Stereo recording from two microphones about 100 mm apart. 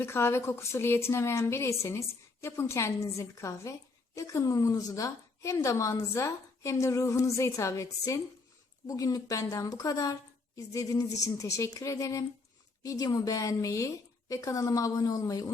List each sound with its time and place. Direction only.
0.0 s a woman's voice: 25° left (ahead or behind)